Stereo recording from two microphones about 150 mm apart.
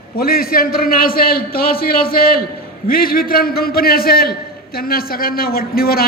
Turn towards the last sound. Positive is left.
turn(degrees=85)